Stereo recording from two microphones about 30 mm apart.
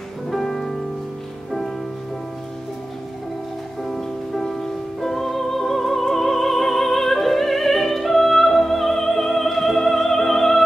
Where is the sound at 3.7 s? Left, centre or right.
Centre.